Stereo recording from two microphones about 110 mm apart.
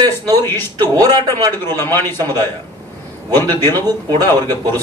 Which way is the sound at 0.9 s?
35° right (ahead or behind).